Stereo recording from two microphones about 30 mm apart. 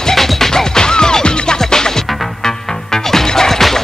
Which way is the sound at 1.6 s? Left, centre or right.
Centre.